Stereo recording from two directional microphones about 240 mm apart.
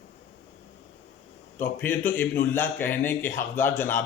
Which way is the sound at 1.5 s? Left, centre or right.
Centre.